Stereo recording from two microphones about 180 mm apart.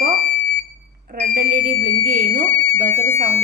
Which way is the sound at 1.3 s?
50° right (ahead or behind).